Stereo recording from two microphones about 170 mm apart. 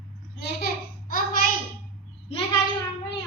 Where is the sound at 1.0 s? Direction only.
60° left (ahead or behind).